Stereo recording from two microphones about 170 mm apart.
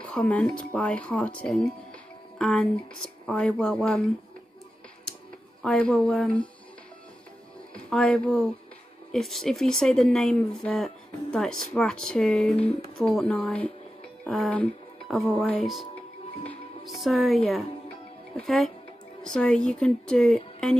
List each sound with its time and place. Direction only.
0.0 s speech: 10° left (ahead or behind)
5.6 s speech: 5° left (ahead or behind)
7.7 s speech: 5° left (ahead or behind)
16.4 s music: centre (ahead or behind)
18.3 s speech: centre (ahead or behind)